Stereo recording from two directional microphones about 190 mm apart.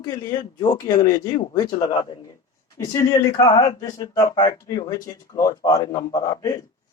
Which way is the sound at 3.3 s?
20° left (ahead or behind).